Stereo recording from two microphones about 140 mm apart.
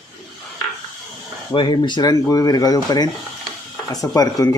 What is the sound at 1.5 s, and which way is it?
Speech, 35° left (ahead or behind).